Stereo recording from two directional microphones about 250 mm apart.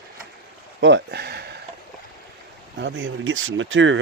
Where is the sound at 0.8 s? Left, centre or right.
Right.